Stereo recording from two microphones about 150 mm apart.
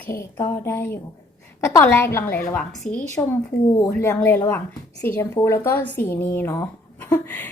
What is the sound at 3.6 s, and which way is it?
Speech, 25° left (ahead or behind).